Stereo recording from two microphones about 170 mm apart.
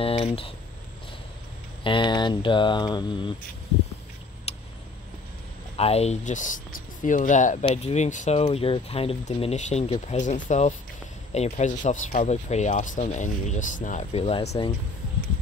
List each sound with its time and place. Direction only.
0.0 s speech: 35° left (ahead or behind)
1.8 s speech: 30° left (ahead or behind)
4.5 s a sound: 35° left (ahead or behind)
5.8 s speech: 35° left (ahead or behind)
8.5 s speech: 35° left (ahead or behind)